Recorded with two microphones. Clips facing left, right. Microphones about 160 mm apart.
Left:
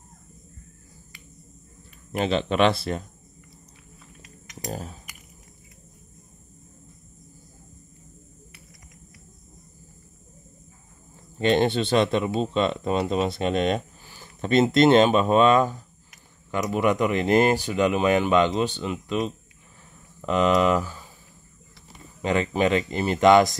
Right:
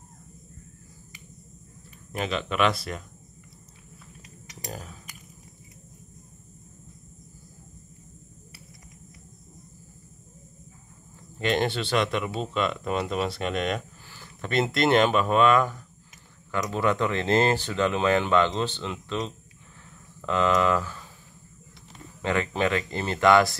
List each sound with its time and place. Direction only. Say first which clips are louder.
2.1 s speech: left 5 dB; 30° left (ahead or behind)
4.6 s a sound: left 5 dB; 30° left (ahead or behind)
11.3 s speech: left 5 dB; 25° left (ahead or behind)
22.2 s speech: left 3 dB; 20° left (ahead or behind)